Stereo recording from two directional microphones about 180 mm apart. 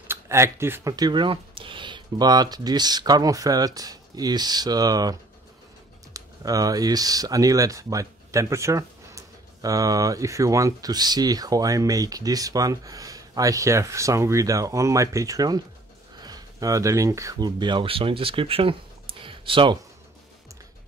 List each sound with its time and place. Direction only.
0.1 s speech: 15° right (ahead or behind)
6.1 s speech: 20° right (ahead or behind)
19.2 s a sound: 30° right (ahead or behind)